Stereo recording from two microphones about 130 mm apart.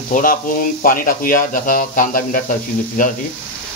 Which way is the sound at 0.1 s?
90° left.